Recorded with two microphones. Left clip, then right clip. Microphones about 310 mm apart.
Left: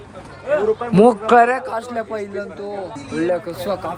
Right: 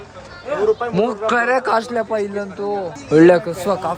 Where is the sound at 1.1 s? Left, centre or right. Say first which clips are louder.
Left 4 dB; centre.